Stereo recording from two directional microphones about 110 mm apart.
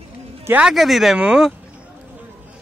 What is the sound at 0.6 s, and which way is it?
Speech, 5° right (ahead or behind).